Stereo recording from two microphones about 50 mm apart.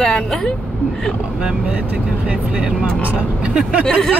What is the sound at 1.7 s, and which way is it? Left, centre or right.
Speech, right.